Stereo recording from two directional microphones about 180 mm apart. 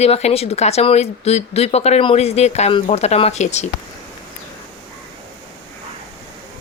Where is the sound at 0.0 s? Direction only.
35° left (ahead or behind).